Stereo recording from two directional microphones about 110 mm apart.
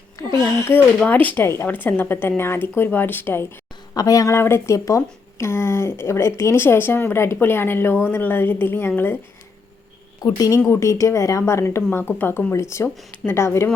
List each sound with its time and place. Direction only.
0.2 s speech: 25° left (ahead or behind)
0.9 s a woman's voice: 10° left (ahead or behind)
3.9 s speech: 35° left (ahead or behind)
10.2 s speech: 35° left (ahead or behind)